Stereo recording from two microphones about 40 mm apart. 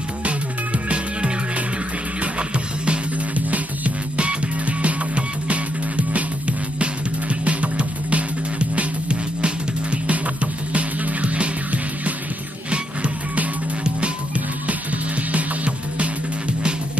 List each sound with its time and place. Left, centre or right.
0.8 s music: right
2.3 s music: right
3.4 s music: right
13.8 s music: right